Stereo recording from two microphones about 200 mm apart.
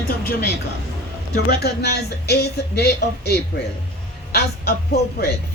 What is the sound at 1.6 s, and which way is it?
Speech, 55° left (ahead or behind).